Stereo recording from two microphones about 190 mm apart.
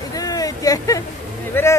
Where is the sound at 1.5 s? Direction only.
10° left (ahead or behind).